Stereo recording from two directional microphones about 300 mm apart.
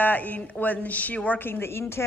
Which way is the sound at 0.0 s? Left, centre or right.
Centre.